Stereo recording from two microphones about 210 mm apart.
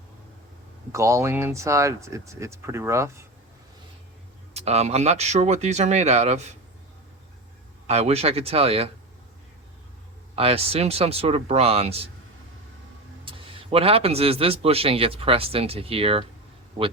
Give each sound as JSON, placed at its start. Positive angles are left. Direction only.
{"t": 0.9, "sound": "speech", "side_deg": -15}
{"t": 4.5, "sound": "speech", "side_deg": -30}
{"t": 7.9, "sound": "speech", "side_deg": -30}
{"t": 10.3, "sound": "speech", "side_deg": -25}
{"t": 13.2, "sound": "speech", "side_deg": -25}